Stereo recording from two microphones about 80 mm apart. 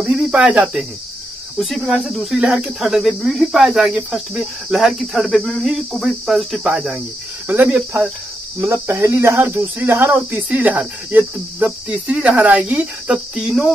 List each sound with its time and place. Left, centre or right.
0.0 s cricket: centre
1.6 s speech: centre
8.5 s speech: right; by 13.5 s centre
13.5 s speech: centre